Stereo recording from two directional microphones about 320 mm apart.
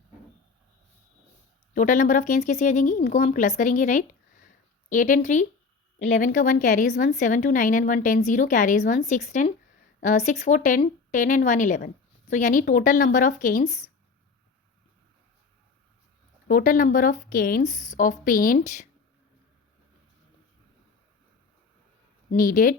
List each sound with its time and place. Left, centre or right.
1.7 s a woman's voice: left
16.5 s a woman's voice: left
22.3 s a woman's voice: left